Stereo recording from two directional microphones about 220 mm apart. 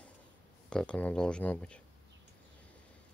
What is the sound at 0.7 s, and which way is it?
Speech, 5° left (ahead or behind).